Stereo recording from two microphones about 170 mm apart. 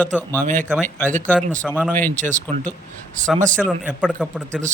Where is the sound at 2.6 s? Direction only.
10° left (ahead or behind).